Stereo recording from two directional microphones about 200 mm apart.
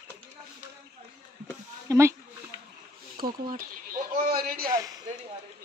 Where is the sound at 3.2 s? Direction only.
45° right (ahead or behind).